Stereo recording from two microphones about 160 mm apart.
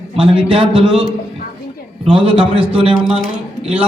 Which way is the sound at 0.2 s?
35° right (ahead or behind).